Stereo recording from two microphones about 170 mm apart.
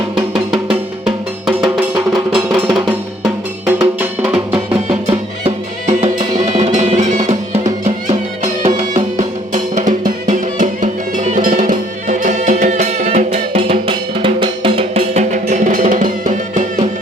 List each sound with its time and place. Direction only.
0.5 s music: 5° right (ahead or behind)
3.7 s music: 10° right (ahead or behind)
4.5 s music: 30° right (ahead or behind)
9.1 s music: 45° right (ahead or behind)